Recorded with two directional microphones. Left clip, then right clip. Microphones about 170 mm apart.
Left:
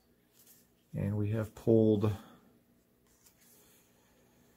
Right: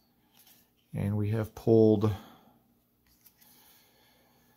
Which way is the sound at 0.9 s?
30° right (ahead or behind).